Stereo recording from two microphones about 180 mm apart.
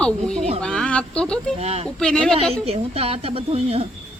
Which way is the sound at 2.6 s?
35° right (ahead or behind).